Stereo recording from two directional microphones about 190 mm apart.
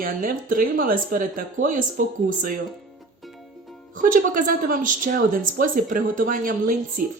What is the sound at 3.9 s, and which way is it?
A woman's voice, 45° right (ahead or behind).